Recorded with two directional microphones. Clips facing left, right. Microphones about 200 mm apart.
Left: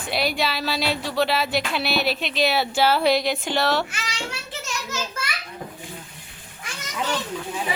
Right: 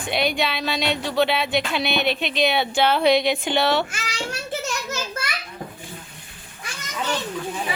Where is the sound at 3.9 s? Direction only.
40° right (ahead or behind).